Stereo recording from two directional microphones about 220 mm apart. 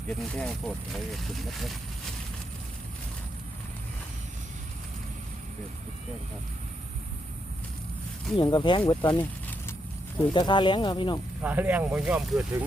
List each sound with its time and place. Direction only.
0.1 s speech: 5° left (ahead or behind)
8.4 s speech: 20° left (ahead or behind)
10.3 s speech: 20° left (ahead or behind)
11.4 s speech: 10° right (ahead or behind)